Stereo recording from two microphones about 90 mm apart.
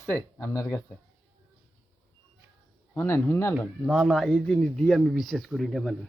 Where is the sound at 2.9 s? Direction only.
30° left (ahead or behind).